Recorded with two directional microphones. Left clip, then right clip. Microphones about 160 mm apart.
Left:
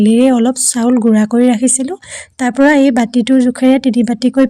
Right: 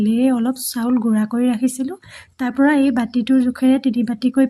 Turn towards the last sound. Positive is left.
turn(degrees=45)  # may be behind; listen again after turning